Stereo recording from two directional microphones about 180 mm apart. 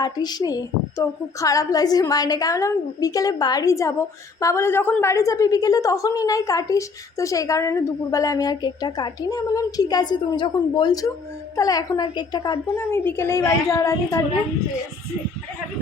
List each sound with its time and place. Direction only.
0.0 s a woman's voice: 20° left (ahead or behind)
12.8 s a woman's voice: 10° left (ahead or behind)